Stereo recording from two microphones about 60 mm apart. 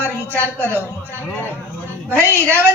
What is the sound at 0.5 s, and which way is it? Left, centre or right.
Speech, right.